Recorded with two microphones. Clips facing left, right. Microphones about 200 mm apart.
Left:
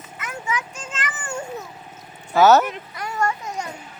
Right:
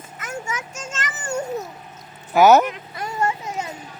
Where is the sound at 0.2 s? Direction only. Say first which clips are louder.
Left 1 dB; 45° right (ahead or behind).